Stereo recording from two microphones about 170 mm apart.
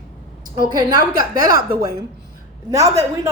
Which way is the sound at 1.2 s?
55° right (ahead or behind).